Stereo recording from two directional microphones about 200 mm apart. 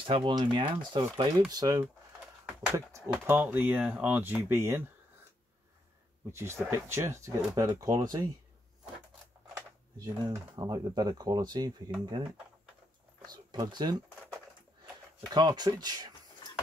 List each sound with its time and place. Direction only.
0.0 s speech: 25° right (ahead or behind)
6.3 s speech: 15° right (ahead or behind)
9.5 s speech: 20° right (ahead or behind)
13.3 s speech: 20° right (ahead or behind)
15.1 s speech: 20° right (ahead or behind)